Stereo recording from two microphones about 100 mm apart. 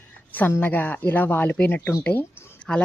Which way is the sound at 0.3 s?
20° left (ahead or behind).